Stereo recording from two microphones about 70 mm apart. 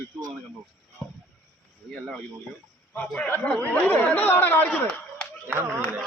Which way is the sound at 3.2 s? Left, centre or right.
Left.